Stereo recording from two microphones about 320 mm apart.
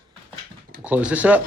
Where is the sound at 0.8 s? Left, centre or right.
Centre.